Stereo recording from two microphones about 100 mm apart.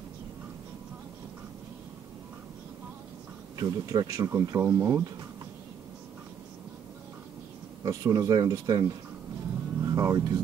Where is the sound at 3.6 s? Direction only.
45° right (ahead or behind).